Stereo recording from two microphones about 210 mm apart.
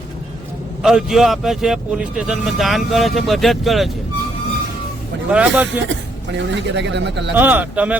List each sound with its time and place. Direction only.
0.8 s speech: centre (ahead or behind)
5.3 s speech: 5° right (ahead or behind)
6.3 s speech: 55° right (ahead or behind)
7.3 s speech: 10° right (ahead or behind)